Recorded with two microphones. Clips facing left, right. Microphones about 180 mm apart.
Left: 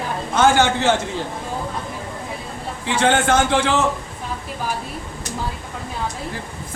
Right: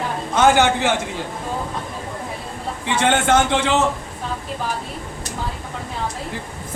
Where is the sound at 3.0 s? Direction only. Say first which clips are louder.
Even; 20° right (ahead or behind).